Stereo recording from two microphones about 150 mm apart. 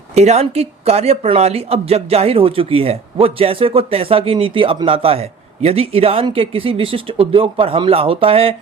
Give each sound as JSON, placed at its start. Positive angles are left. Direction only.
{"t": 0.2, "sound": "speech", "side_deg": -45}